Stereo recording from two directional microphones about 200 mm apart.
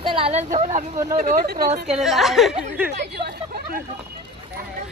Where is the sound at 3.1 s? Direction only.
50° right (ahead or behind).